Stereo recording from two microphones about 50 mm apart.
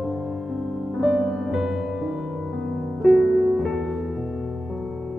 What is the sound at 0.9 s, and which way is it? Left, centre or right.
Music, centre.